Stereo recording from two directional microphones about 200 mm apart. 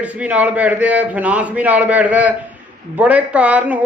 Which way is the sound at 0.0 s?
5° right (ahead or behind).